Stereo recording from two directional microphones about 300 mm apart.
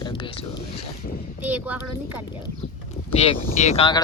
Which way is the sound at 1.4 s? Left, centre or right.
Centre.